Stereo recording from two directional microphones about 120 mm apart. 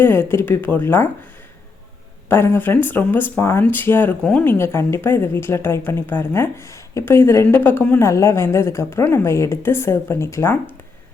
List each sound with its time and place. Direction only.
0.0 s speech: 20° left (ahead or behind)
2.3 s speech: 20° left (ahead or behind)
4.2 s speech: 5° left (ahead or behind)
4.4 s a woman's voice: 20° left (ahead or behind)